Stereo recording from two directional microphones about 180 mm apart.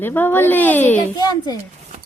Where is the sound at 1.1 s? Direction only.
20° left (ahead or behind).